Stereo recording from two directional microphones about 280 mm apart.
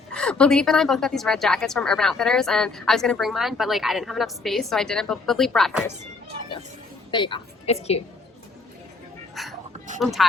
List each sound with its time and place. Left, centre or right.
0.1 s a woman's voice: centre
7.1 s a woman's voice: centre
9.3 s a sound: centre
10.0 s a woman's voice: centre